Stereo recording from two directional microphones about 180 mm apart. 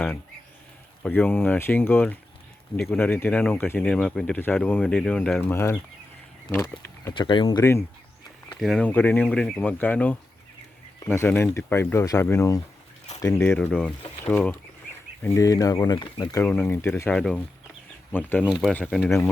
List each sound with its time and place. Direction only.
1.0 s speech: 10° left (ahead or behind)
7.1 s speech: 25° left (ahead or behind)
7.6 s speech: 15° left (ahead or behind)
13.7 s speech: centre (ahead or behind)